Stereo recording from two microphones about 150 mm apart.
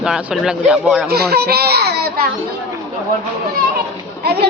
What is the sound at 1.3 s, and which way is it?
Speech, 90° right.